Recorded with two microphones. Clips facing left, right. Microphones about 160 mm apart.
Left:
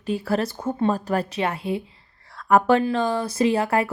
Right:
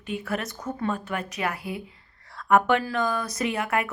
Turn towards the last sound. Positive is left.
turn(degrees=30)  # may be behind; listen again after turning